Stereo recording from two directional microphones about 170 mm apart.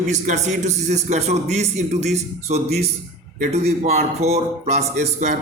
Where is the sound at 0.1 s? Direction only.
45° right (ahead or behind).